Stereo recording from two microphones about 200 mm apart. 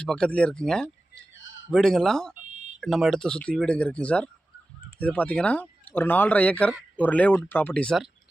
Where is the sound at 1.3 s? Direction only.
70° left (ahead or behind).